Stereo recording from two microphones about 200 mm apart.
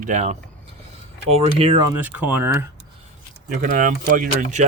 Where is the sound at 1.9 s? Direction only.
10° right (ahead or behind).